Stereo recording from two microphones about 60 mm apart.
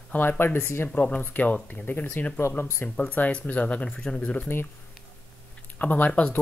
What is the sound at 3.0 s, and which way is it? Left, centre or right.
Speech, left.